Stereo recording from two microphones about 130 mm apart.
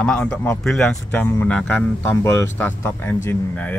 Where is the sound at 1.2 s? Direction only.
15° left (ahead or behind).